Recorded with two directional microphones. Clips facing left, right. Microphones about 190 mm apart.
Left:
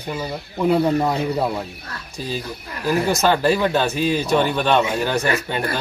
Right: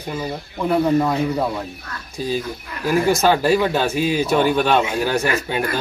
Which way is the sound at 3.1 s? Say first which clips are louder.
Right 2 dB; 10° right (ahead or behind).